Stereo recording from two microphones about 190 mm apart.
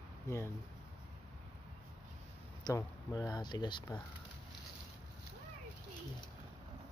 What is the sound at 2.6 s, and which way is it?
Speech, 20° left (ahead or behind).